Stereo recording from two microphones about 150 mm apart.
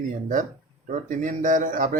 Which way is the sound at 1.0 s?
60° right (ahead or behind).